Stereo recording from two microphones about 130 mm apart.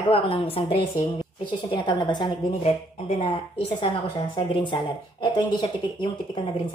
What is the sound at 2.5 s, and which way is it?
Speech, 55° left (ahead or behind).